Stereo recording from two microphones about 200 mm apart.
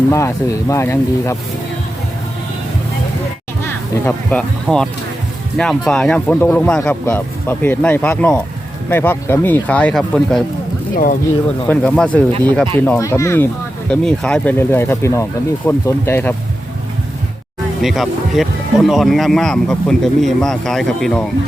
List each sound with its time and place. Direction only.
0.1 s speech: 15° left (ahead or behind)
4.0 s speech: 5° left (ahead or behind)
10.9 s speech: 45° left (ahead or behind)
11.7 s speech: 5° left (ahead or behind)
17.8 s speech: centre (ahead or behind)